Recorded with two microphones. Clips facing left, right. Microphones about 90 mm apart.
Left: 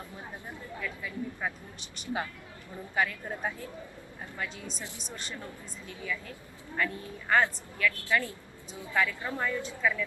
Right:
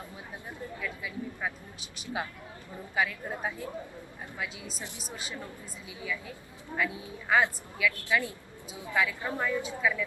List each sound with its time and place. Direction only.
0.8 s a woman's voice: centre (ahead or behind)